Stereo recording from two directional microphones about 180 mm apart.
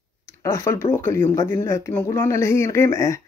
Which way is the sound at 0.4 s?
15° left (ahead or behind).